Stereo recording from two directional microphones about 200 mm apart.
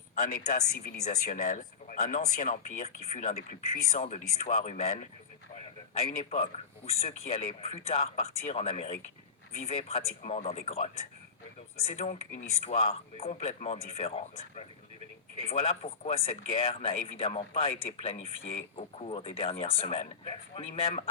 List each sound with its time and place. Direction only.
0.2 s speech: 50° left (ahead or behind)
1.0 s speech: 40° left (ahead or behind)
5.9 s speech: 30° left (ahead or behind)